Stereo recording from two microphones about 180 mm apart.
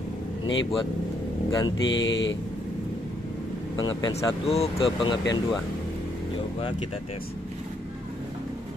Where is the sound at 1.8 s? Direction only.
90° left.